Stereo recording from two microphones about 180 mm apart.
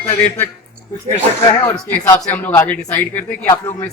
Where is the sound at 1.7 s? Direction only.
15° left (ahead or behind).